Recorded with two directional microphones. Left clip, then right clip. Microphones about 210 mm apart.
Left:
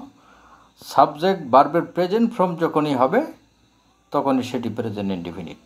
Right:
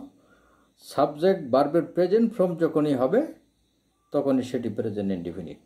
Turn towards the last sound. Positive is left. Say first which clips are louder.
# left 2 dB
turn(degrees=-10)  # may be behind; listen again after turning